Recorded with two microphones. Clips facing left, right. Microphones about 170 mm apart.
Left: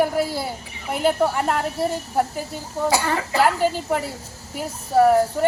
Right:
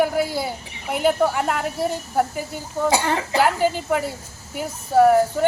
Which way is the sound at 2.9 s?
20° right (ahead or behind).